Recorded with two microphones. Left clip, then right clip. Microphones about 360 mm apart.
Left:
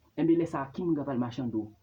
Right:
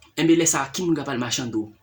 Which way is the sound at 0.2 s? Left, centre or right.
Left.